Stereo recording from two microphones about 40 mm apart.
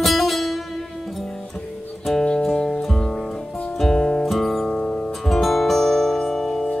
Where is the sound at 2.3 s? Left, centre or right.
Centre.